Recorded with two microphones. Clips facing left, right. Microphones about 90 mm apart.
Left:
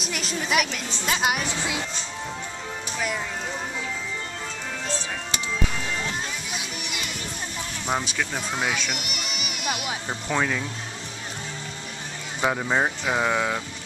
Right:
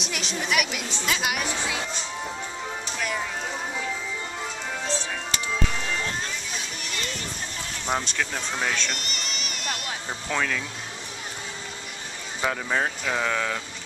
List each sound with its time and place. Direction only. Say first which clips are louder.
0.0 s a woman's voice: left 1 dB; centre (ahead or behind)
1.0 s speech: left 3 dB; 30° left (ahead or behind)
6.5 s music: left 1 dB; 15° left (ahead or behind)
7.8 s speech: even; 5° left (ahead or behind)
12.4 s speech: left 3 dB; 15° left (ahead or behind)